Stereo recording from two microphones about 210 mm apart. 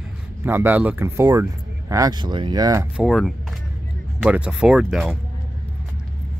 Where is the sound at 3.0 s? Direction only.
Centre (ahead or behind).